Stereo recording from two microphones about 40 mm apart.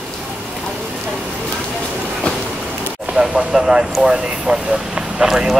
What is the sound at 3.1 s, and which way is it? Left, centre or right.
Speech, centre.